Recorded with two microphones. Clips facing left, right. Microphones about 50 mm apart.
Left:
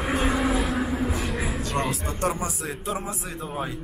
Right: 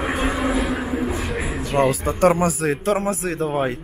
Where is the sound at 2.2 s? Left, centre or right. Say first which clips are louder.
Right 11 dB; right.